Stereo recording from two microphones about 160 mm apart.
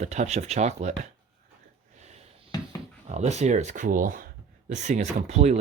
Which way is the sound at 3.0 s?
45° right (ahead or behind).